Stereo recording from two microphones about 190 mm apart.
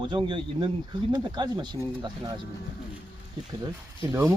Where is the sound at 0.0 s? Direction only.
25° right (ahead or behind).